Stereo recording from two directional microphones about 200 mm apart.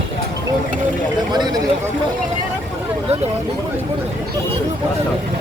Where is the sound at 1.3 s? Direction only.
20° right (ahead or behind).